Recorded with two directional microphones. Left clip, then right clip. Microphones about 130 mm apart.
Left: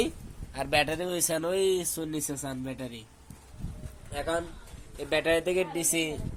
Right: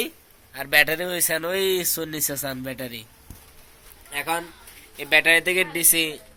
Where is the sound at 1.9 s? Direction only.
35° right (ahead or behind).